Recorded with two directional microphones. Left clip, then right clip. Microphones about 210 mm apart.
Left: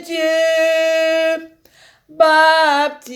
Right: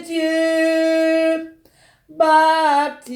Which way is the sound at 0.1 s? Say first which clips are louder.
Left 3 dB; 25° left (ahead or behind).